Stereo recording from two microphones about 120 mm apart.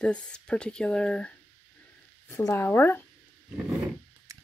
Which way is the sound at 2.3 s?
20° left (ahead or behind).